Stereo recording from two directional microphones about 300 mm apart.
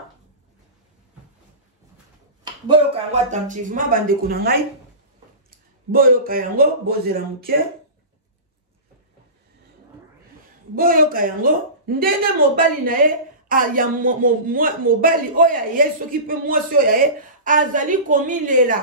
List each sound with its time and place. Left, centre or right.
2.4 s speech: centre
5.9 s speech: right
10.8 s speech: right